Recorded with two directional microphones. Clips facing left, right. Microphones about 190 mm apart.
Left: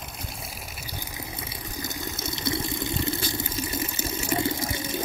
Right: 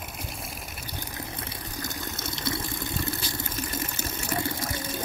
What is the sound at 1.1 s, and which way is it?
Water, 10° left (ahead or behind).